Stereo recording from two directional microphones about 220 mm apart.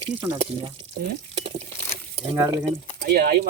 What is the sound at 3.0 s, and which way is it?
Speech, 45° right (ahead or behind).